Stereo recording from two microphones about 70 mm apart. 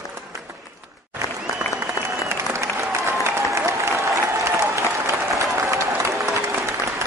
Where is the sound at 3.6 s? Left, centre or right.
Right.